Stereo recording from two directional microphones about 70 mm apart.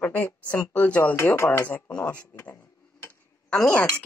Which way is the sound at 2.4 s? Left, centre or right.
Left.